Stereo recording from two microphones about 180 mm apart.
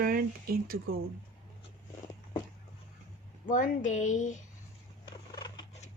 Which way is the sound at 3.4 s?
45° left (ahead or behind).